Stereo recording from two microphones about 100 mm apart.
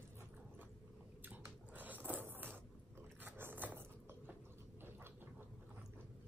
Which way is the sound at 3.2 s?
20° right (ahead or behind).